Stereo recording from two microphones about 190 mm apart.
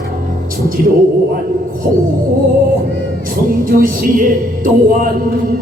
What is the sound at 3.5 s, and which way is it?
A man's voice, 45° right (ahead or behind).